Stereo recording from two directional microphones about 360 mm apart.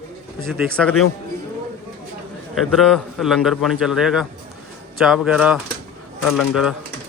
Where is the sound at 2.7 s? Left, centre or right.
Centre.